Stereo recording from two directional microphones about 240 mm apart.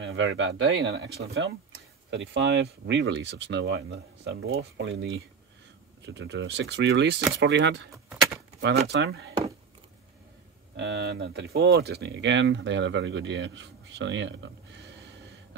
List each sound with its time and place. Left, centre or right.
0.0 s speech: right
7.9 s keys jangling: centre
8.5 s speech: right
10.8 s speech: right